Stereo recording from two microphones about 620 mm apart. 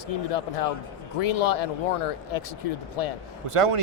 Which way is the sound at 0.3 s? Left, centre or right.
Left.